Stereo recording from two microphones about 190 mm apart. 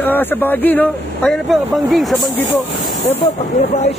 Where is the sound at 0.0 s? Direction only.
10° left (ahead or behind).